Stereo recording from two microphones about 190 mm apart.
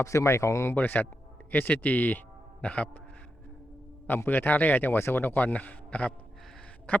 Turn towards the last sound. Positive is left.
turn(degrees=5)  # may be behind; listen again after turning